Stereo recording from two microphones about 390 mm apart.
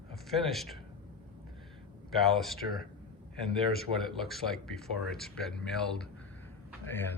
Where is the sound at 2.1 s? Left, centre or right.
Centre.